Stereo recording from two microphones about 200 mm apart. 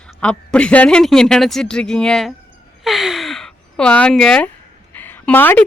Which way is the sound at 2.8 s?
Centre (ahead or behind).